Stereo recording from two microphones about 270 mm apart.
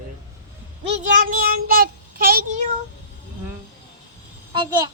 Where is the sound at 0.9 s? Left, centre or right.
Right.